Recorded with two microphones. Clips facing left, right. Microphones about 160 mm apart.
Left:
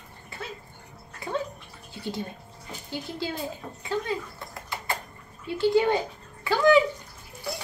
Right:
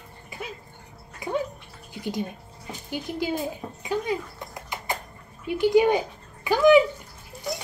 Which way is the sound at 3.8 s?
15° right (ahead or behind).